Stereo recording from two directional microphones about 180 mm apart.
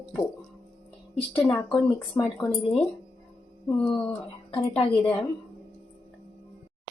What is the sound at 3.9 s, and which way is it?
Speech, 30° left (ahead or behind).